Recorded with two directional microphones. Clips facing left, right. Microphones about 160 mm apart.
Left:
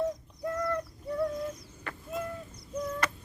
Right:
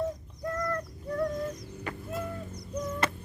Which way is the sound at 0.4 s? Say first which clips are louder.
Left 1 dB; 5° left (ahead or behind).